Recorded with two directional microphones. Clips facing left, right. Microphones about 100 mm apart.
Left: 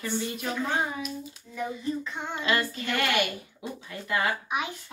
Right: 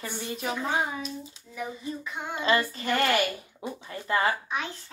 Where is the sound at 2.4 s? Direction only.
35° right (ahead or behind).